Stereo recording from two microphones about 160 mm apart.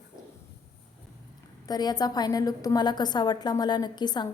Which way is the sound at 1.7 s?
25° left (ahead or behind).